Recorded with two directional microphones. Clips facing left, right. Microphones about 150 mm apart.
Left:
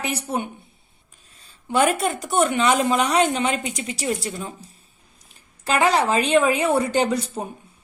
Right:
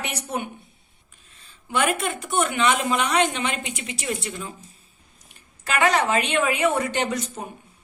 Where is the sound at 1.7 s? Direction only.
40° left (ahead or behind).